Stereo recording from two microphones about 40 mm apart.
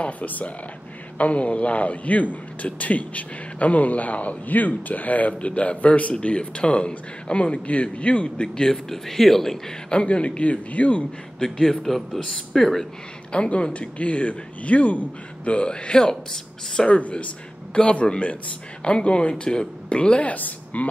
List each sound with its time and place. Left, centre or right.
0.0 s a man's voice: left
8.6 s speech: centre
9.8 s a man's voice: left
11.3 s a man's voice: centre
11.6 s speech: centre
13.3 s a man's voice: left
17.0 s a man's voice: left
20.3 s a woman's voice: left